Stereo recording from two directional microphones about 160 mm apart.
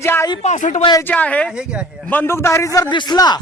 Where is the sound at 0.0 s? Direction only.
15° left (ahead or behind).